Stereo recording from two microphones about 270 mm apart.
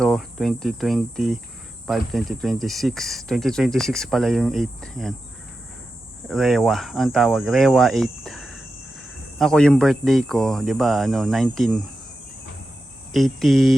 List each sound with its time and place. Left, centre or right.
0.0 s speech: centre
6.2 s speech: centre
13.1 s speech: centre